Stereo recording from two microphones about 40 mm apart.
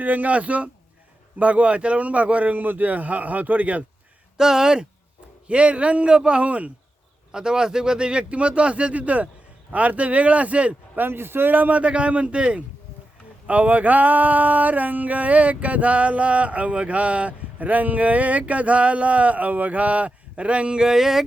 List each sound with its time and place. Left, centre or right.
0.0 s a sound: right
4.4 s speech: centre
5.5 s speech: right
7.3 s speech: centre; by 9.3 s right
9.7 s a sound: right
10.9 s speech: right
11.5 s speech: right
11.8 s speech: right
13.5 s a sound: right; by 21.2 s centre